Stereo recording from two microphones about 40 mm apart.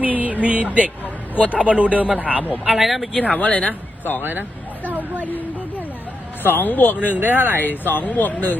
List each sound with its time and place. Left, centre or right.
0.0 s a sound: right
1.0 s a sound: left
1.5 s speech: right
2.7 s speech: centre
3.2 s speech: left
4.2 s vehicle: right
5.2 s a sound: left
6.4 s speech: left
7.1 s speech: right
7.6 s speech: left